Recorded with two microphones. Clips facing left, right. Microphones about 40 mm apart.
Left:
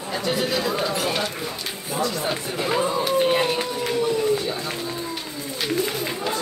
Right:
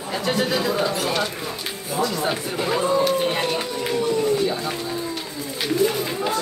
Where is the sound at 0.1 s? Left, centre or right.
Centre.